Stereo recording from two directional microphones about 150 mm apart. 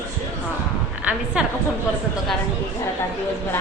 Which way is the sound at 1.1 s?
10° right (ahead or behind).